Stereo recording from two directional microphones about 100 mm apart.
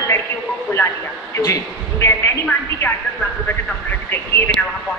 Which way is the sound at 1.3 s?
30° left (ahead or behind).